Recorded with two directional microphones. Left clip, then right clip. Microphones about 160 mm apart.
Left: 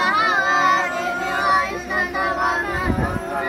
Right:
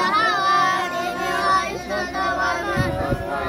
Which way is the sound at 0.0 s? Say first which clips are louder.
Left 1 dB; 30° right (ahead or behind).